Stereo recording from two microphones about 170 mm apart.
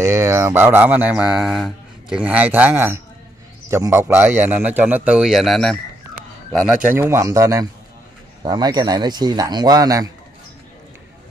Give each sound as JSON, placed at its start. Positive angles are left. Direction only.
{"t": 0.0, "sound": "mantra", "side_deg": -15}
{"t": 6.9, "sound": "mantra", "side_deg": -15}
{"t": 8.4, "sound": "a man's voice", "side_deg": -25}